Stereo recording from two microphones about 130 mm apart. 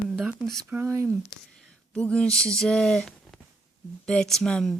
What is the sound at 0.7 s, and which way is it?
Speech, 20° right (ahead or behind).